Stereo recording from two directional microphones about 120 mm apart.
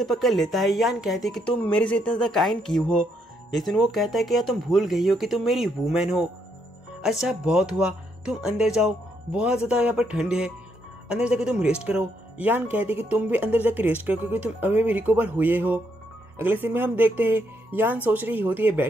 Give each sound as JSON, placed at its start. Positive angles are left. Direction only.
{"t": 0.0, "sound": "speech", "side_deg": 0}